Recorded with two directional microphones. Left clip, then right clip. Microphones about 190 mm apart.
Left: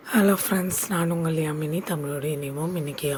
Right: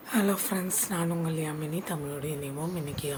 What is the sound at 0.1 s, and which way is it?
Speech, 25° left (ahead or behind).